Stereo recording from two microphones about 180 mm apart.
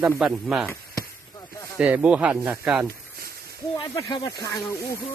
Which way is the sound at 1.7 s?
5° right (ahead or behind).